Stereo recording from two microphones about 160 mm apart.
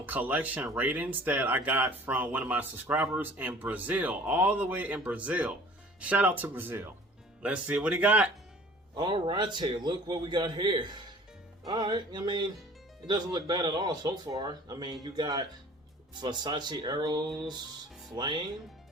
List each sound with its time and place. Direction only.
0.0 s speech: 10° right (ahead or behind)
9.0 s speech: 30° right (ahead or behind)